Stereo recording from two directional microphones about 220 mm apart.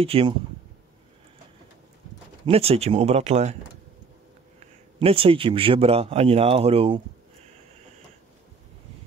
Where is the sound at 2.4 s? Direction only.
25° right (ahead or behind).